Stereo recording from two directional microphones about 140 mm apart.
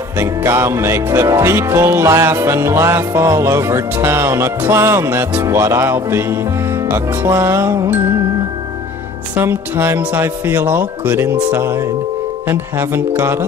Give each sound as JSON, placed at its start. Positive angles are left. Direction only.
{"t": 0.2, "sound": "music", "side_deg": -20}
{"t": 6.9, "sound": "speech", "side_deg": -15}
{"t": 9.4, "sound": "speech", "side_deg": -15}